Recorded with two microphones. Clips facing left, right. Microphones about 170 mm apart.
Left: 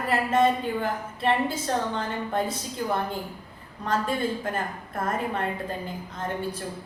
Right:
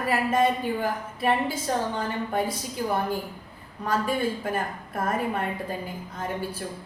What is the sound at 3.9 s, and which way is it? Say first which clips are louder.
A woman's voice: right 1 dB; 10° right (ahead or behind).